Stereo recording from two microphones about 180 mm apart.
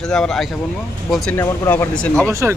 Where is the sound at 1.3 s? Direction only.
15° left (ahead or behind).